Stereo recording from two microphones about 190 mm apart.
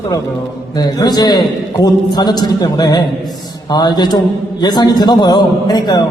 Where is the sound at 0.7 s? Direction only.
20° left (ahead or behind).